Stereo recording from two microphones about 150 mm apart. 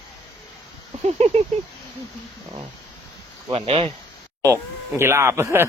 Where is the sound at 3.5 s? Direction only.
40° right (ahead or behind).